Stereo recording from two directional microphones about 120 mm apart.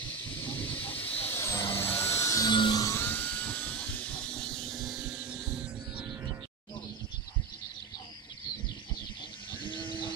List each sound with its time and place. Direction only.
0.4 s vehicle: 15° left (ahead or behind)
1.8 s a sound: 15° left (ahead or behind)
3.0 s vehicle: 15° left (ahead or behind); by 6.0 s 10° right (ahead or behind)
9.6 s goat: 45° left (ahead or behind)